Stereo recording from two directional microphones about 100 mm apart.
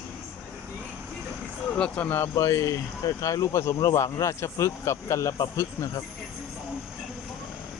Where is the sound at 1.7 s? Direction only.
10° left (ahead or behind); by 6.0 s 30° left (ahead or behind).